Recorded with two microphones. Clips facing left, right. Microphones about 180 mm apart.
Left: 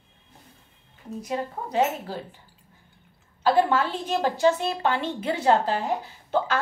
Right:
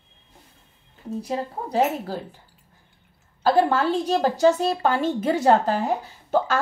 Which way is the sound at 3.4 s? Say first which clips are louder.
Right 2 dB; 40° right (ahead or behind).